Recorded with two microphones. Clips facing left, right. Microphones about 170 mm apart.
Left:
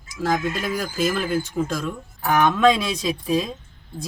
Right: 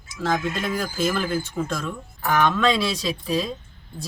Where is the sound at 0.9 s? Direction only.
10° left (ahead or behind).